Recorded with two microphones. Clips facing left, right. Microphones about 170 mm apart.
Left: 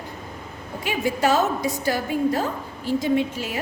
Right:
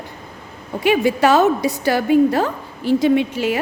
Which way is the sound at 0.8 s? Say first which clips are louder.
Right 8 dB; 70° right (ahead or behind).